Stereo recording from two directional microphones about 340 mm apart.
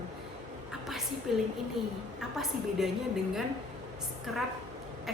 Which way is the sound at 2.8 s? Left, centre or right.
Centre.